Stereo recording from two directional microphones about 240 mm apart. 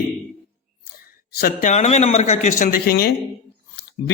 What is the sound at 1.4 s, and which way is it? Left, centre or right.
A man's voice, left.